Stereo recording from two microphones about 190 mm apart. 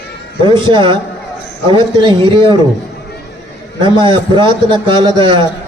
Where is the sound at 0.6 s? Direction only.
25° right (ahead or behind).